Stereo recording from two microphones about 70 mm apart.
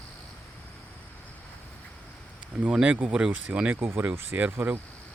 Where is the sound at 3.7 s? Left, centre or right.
Right.